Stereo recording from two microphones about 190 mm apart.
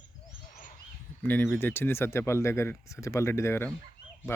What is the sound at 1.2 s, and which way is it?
Speech, 10° left (ahead or behind).